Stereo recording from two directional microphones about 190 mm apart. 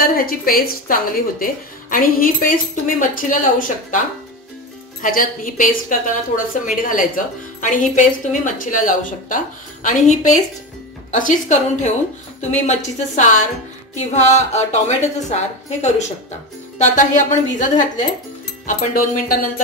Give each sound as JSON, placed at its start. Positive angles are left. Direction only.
{"t": 0.0, "sound": "a woman's voice", "side_deg": 50}
{"t": 5.0, "sound": "a woman's voice", "side_deg": 45}